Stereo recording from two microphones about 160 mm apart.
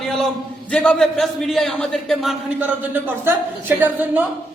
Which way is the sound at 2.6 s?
10° right (ahead or behind).